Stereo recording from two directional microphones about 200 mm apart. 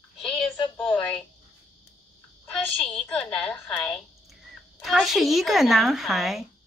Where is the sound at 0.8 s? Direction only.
5° left (ahead or behind).